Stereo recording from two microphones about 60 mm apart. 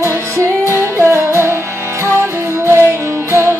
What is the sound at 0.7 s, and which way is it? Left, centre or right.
Music, right.